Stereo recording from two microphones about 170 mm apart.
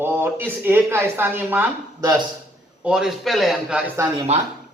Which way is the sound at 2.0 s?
25° right (ahead or behind).